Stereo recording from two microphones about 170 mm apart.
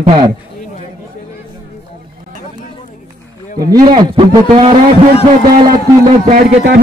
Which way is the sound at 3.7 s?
25° right (ahead or behind).